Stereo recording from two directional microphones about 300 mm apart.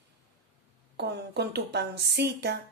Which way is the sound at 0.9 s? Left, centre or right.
Right.